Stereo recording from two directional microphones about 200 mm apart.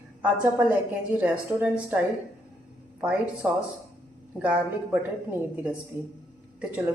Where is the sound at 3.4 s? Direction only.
15° right (ahead or behind).